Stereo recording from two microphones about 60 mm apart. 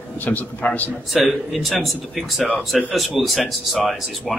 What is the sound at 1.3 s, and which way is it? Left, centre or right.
A man's voice, centre.